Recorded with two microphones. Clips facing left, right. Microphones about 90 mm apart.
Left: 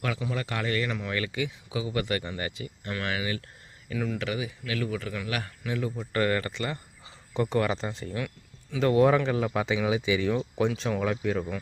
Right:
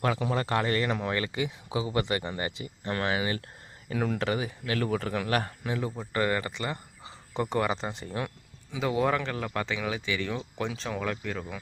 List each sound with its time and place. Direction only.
0.2 s speech: 40° right (ahead or behind)
3.9 s speech: 50° right (ahead or behind); by 5.9 s 30° right (ahead or behind)
6.0 s speech: 20° right (ahead or behind)
8.8 s speech: centre (ahead or behind)